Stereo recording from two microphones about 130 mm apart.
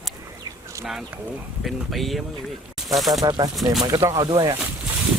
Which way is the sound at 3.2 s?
30° right (ahead or behind).